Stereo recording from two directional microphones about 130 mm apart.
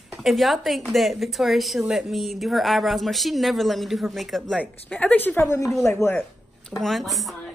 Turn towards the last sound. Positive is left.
turn(degrees=0)  # may be behind; listen again after turning